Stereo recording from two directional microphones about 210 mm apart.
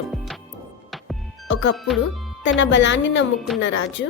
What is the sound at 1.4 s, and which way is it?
A woman's voice, 60° left (ahead or behind).